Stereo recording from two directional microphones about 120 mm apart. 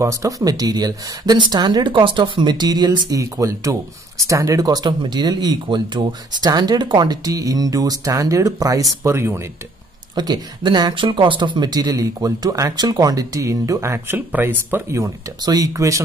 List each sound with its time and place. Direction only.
0.0 s speech: 25° right (ahead or behind)
10.1 s speech: 35° right (ahead or behind); by 15.0 s 20° right (ahead or behind)
15.4 s speech: 30° right (ahead or behind)